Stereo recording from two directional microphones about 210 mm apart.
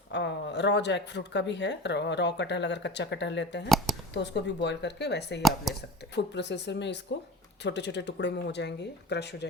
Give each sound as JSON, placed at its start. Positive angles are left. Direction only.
{"t": 0.1, "sound": "speech", "side_deg": 55}
{"t": 5.4, "sound": "speech", "side_deg": 0}
{"t": 6.1, "sound": "speech", "side_deg": 55}